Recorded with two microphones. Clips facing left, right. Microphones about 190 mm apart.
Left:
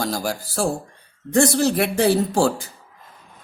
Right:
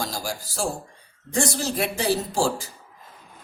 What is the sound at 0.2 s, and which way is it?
Speech, 60° left (ahead or behind).